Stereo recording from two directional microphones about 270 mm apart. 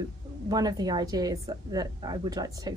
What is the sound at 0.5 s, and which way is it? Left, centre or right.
A woman's voice, centre.